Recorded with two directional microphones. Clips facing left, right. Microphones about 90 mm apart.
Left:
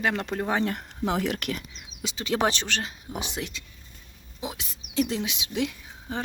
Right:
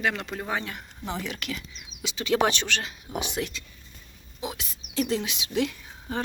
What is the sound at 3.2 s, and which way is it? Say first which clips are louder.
A woman's voice: right 4 dB; 25° left (ahead or behind).